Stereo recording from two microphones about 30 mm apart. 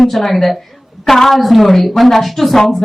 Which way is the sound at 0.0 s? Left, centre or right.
Centre.